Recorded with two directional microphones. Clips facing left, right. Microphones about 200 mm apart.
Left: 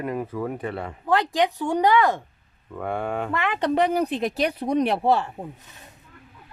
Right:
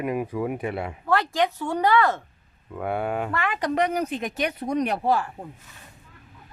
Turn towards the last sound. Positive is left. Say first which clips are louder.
# left 2 dB
turn(degrees=25)  # may be behind; listen again after turning